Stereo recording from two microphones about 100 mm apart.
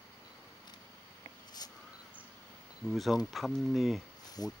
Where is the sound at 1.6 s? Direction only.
40° left (ahead or behind).